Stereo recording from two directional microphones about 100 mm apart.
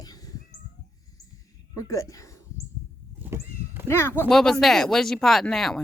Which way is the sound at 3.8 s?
25° left (ahead or behind).